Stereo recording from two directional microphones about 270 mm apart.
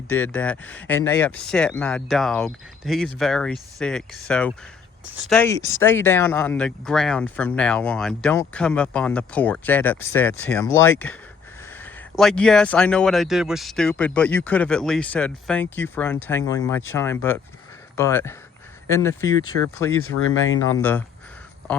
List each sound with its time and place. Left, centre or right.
0.1 s speech: centre
19.9 s speech: left
20.7 s speech: centre